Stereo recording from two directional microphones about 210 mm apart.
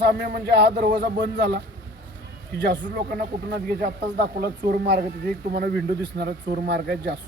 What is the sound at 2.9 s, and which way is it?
Speech, 45° right (ahead or behind).